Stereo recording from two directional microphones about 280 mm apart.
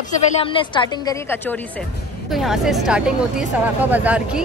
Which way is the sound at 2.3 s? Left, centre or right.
Centre.